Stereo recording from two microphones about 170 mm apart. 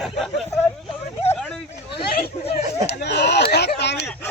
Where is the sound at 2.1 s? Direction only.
60° left (ahead or behind).